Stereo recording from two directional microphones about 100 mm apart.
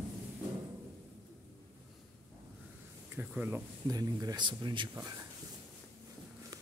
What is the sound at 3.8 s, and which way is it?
Speech, 40° right (ahead or behind).